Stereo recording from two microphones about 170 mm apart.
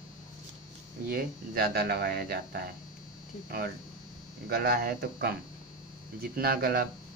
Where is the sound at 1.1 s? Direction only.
60° right (ahead or behind).